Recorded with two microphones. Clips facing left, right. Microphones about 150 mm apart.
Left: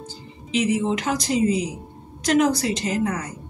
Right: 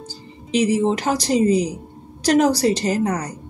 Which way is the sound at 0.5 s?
40° right (ahead or behind).